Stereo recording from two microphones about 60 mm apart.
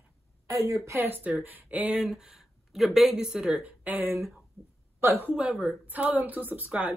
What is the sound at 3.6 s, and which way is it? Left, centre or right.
Speech, right.